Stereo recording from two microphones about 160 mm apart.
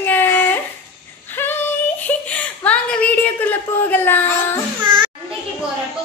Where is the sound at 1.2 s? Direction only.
10° left (ahead or behind).